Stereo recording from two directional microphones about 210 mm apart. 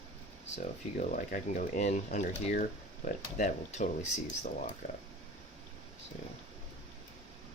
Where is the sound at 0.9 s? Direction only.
35° left (ahead or behind).